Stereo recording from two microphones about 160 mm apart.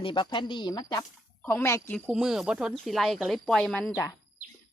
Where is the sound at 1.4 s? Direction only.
15° left (ahead or behind).